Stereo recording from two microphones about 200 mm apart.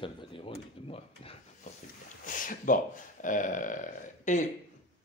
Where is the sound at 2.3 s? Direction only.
40° left (ahead or behind).